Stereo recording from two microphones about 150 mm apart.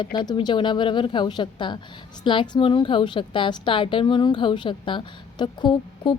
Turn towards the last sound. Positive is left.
turn(degrees=30)  # may be behind; listen again after turning